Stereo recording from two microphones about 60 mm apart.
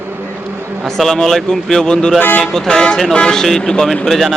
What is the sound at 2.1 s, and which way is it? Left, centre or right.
Speech, left.